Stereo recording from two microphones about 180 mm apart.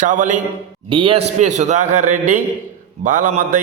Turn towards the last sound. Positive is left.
turn(degrees=-45)  # may be behind; listen again after turning